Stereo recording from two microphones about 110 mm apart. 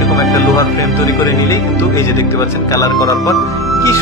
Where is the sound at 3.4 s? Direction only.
25° left (ahead or behind).